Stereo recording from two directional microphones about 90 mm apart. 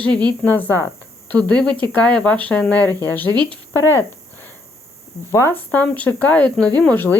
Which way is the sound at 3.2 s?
50° right (ahead or behind).